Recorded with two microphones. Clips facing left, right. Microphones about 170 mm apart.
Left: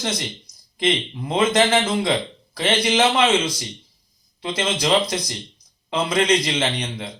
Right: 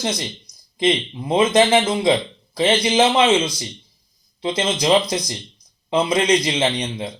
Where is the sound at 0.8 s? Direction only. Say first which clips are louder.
Right 3 dB; 15° right (ahead or behind).